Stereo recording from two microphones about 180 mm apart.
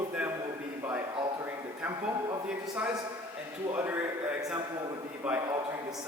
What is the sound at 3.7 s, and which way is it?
A man's voice, 10° right (ahead or behind).